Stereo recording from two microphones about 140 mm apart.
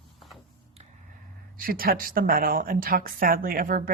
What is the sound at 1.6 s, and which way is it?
Speech, 90° right.